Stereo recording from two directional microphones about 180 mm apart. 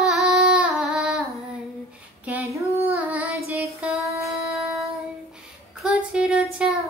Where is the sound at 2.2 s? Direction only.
10° right (ahead or behind).